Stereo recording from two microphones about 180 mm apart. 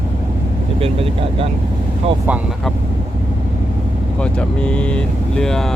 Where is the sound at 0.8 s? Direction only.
30° right (ahead or behind).